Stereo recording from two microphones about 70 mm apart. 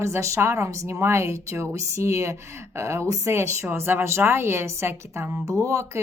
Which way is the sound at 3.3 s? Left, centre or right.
Right.